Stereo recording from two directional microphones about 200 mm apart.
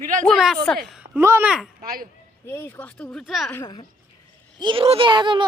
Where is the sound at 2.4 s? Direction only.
10° left (ahead or behind).